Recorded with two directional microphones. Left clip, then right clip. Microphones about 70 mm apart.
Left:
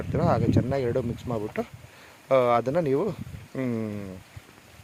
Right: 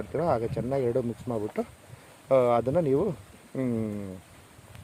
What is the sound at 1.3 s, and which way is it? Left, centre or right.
Speech, centre.